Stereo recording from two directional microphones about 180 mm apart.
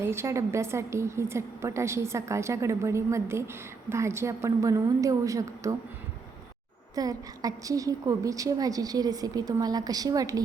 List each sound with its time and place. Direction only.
0.0 s a woman's voice: 15° right (ahead or behind)
6.9 s a woman's voice: 20° right (ahead or behind)